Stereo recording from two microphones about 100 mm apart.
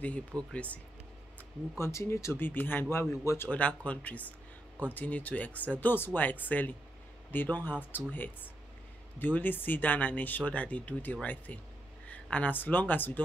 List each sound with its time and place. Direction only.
0.3 s speech: 40° right (ahead or behind)
1.8 s speech: 30° left (ahead or behind)
3.4 s speech: 15° left (ahead or behind)